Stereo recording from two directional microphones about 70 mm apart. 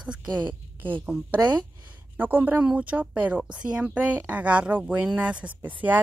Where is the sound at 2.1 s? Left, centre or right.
Right.